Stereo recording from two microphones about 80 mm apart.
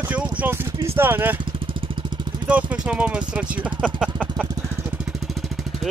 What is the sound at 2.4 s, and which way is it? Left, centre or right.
Speech, centre.